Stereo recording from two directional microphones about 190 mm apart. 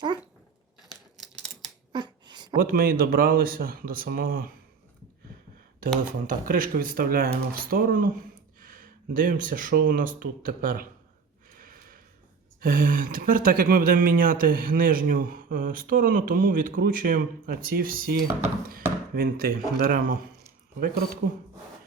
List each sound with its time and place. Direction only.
0.8 s scissors: centre (ahead or behind)
1.9 s a sound: 25° right (ahead or behind)
2.6 s speech: 50° right (ahead or behind)
6.2 s speech: 45° right (ahead or behind)
11.5 s a sound: 45° right (ahead or behind)
12.5 s speech: 45° right (ahead or behind)